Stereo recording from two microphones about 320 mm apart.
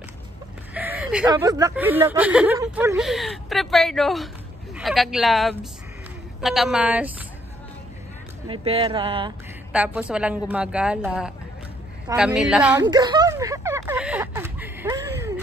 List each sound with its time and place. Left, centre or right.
0.7 s speech: centre
8.5 s speech: centre
9.7 s speech: centre
12.8 s a sound: centre